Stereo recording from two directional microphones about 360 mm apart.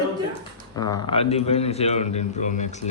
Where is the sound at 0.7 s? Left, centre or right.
Centre.